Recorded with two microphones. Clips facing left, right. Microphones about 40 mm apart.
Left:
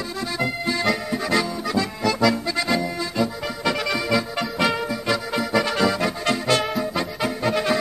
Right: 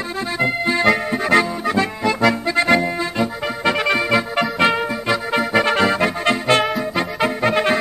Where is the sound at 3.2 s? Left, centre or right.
Right.